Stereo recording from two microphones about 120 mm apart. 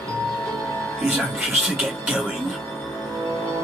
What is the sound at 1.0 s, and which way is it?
Speech, centre (ahead or behind).